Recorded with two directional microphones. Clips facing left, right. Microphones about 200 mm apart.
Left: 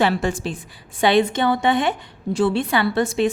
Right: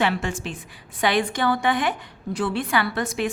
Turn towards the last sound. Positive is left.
turn(degrees=25)  # may be behind; listen again after turning